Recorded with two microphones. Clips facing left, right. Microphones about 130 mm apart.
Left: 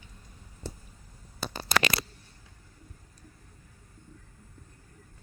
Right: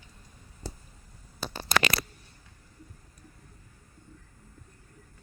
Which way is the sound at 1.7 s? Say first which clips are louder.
Right 1 dB; 50° right (ahead or behind).